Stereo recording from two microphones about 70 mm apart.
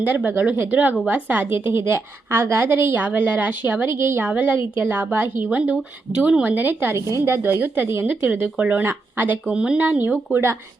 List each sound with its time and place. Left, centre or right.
0.0 s a woman's voice: right
4.3 s a woman's voice: right
6.9 s a woman's voice: right
8.4 s a woman's voice: right
9.5 s speech: centre
9.7 s a woman's voice: right